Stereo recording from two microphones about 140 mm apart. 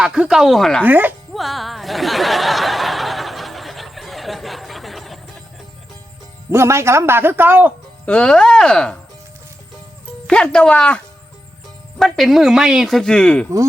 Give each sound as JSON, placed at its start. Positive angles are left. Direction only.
{"t": 0.0, "sound": "speech", "side_deg": -5}
{"t": 0.9, "sound": "speech", "side_deg": -10}
{"t": 1.3, "sound": "a sound", "side_deg": 0}
{"t": 6.5, "sound": "speech", "side_deg": -20}
{"t": 8.0, "sound": "speech", "side_deg": 10}
{"t": 10.2, "sound": "speech", "side_deg": 5}